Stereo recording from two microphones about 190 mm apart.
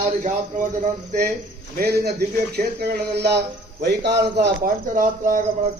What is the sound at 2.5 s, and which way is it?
Speech, 60° right (ahead or behind).